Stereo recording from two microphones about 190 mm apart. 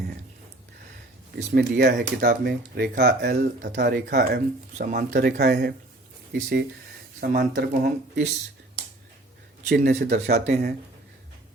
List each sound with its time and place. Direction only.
1.5 s speech: 60° right (ahead or behind)
9.6 s speech: 55° right (ahead or behind)